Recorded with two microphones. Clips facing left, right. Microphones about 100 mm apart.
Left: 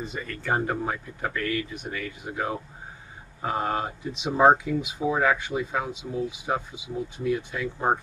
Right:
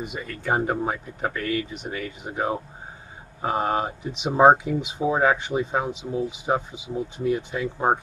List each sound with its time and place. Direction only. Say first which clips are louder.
0.0 s speech: right 2 dB; 15° right (ahead or behind)